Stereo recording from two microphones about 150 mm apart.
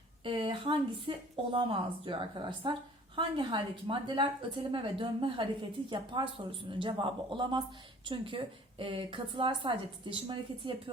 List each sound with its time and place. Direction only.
0.3 s speech: 35° right (ahead or behind)